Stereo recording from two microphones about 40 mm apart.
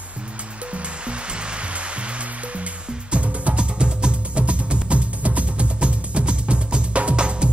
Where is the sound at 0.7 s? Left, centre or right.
Right.